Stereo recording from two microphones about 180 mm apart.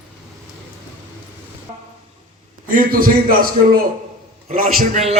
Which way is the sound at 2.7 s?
50° right (ahead or behind).